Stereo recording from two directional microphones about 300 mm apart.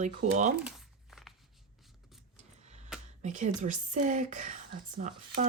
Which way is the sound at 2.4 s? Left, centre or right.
Right.